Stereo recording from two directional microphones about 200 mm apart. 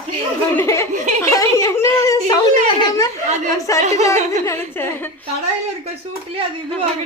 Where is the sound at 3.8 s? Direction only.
35° right (ahead or behind).